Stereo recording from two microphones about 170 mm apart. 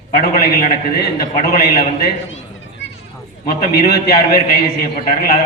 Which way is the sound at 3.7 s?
70° left (ahead or behind).